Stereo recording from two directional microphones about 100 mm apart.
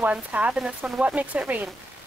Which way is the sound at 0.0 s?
15° right (ahead or behind).